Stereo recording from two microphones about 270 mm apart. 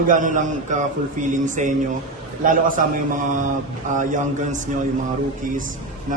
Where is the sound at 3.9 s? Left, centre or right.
Right.